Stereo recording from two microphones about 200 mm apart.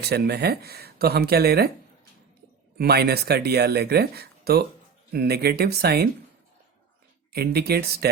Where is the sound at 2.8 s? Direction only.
50° right (ahead or behind).